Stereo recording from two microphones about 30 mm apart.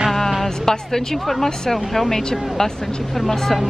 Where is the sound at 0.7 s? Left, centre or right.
Centre.